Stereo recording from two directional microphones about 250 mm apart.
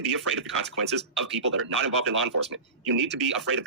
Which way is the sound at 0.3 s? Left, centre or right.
Right.